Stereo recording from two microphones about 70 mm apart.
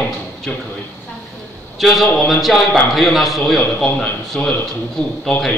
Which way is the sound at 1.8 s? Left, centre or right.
Centre.